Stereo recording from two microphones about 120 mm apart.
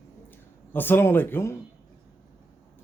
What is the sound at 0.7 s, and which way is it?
Speech, 15° left (ahead or behind).